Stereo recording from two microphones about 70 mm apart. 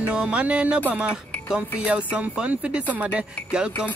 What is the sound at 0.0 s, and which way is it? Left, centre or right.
Speech, centre.